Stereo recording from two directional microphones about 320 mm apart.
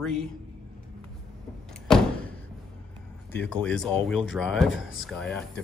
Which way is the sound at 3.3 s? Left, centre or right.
Centre.